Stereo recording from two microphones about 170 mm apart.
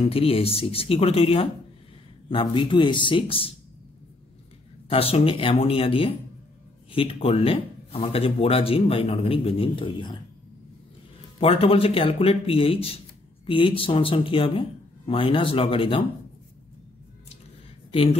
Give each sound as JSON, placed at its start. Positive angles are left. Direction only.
{"t": 0.0, "sound": "speech", "side_deg": 35}
{"t": 4.8, "sound": "speech", "side_deg": 35}
{"t": 11.3, "sound": "speech", "side_deg": 35}